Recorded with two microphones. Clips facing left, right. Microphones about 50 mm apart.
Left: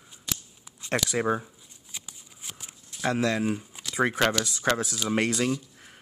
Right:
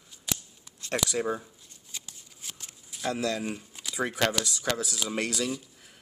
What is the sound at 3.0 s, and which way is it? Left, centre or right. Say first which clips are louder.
Speech: left 4 dB; left.